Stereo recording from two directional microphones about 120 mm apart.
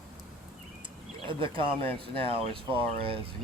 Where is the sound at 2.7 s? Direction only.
50° right (ahead or behind).